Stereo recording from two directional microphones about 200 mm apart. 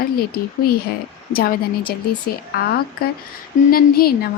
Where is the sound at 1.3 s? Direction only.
45° left (ahead or behind).